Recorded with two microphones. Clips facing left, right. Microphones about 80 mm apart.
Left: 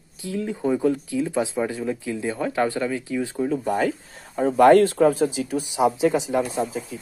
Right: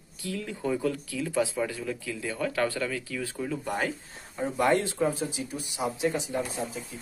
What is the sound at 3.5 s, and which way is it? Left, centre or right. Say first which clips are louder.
Speech: left 7 dB; left.